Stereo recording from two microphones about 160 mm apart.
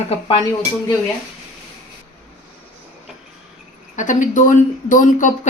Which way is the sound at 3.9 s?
50° left (ahead or behind).